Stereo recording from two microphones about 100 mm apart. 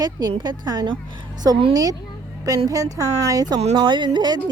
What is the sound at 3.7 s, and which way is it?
Speech, 50° right (ahead or behind).